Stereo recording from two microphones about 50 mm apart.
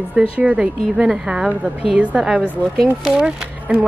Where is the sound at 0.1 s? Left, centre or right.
Right.